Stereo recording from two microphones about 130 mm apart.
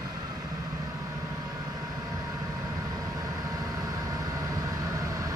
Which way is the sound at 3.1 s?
30° right (ahead or behind).